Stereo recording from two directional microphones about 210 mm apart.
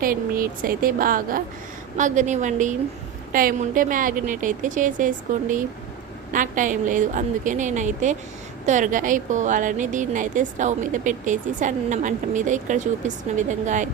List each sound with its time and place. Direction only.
0.0 s a woman's voice: 40° right (ahead or behind)